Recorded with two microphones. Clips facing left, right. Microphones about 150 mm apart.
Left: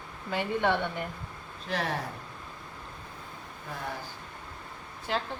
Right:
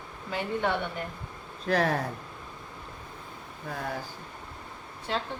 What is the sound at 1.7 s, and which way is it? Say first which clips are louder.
Speech: right 6 dB; 45° right (ahead or behind).